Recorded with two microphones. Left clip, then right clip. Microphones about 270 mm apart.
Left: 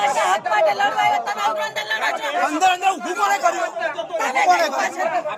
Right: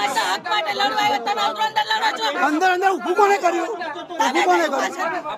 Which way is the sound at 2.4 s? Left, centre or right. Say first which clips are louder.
Even; centre.